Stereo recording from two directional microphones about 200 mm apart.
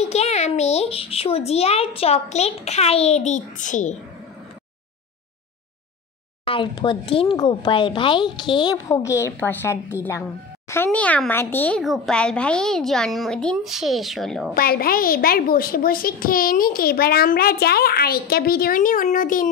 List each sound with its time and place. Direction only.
0.0 s a child's voice: 35° left (ahead or behind)
6.4 s a child's voice: 25° left (ahead or behind); by 14.5 s centre (ahead or behind)
14.5 s a woman's voice: 50° left (ahead or behind)